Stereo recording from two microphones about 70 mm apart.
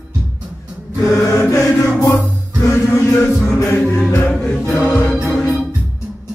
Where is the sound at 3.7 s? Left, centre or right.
Left.